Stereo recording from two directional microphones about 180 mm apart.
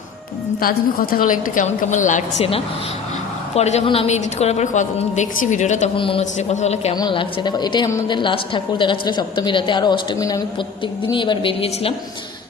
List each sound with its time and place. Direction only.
0.6 s a woman's voice: 55° left (ahead or behind); by 6.9 s 40° left (ahead or behind)
6.9 s a woman's voice: 25° left (ahead or behind)